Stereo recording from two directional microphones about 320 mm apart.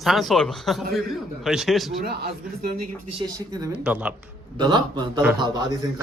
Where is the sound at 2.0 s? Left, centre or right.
Right.